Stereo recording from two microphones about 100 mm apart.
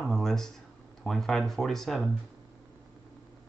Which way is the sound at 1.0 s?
5° left (ahead or behind).